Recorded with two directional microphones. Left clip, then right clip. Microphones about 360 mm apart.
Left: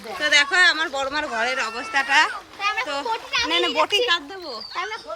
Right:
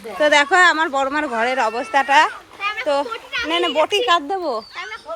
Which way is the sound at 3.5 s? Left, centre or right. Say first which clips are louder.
Right 4 dB; centre.